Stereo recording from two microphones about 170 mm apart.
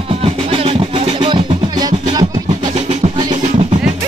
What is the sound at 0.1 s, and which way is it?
Music, 35° right (ahead or behind).